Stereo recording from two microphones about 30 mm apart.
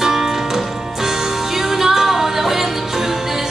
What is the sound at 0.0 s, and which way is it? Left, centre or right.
Music, centre.